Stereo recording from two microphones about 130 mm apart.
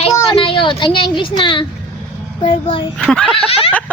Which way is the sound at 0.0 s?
40° left (ahead or behind).